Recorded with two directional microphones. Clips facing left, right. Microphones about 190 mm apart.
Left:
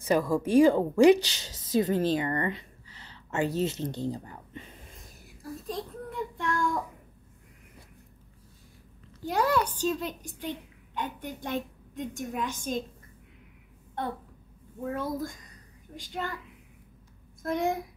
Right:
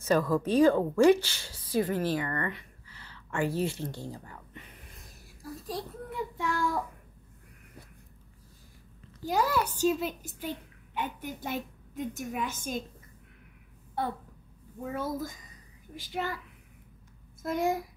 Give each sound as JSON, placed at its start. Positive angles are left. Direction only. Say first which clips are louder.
{"t": 0.0, "sound": "speech", "louder": "left 1 dB", "side_deg": 10}
{"t": 5.7, "sound": "child singing", "louder": "left 1 dB", "side_deg": -5}
{"t": 9.2, "sound": "a woman's voice", "louder": "left 2 dB", "side_deg": 0}
{"t": 15.0, "sound": "a woman's voice", "louder": "right 1 dB", "side_deg": 0}
{"t": 17.4, "sound": "a woman's voice", "louder": "even", "side_deg": 0}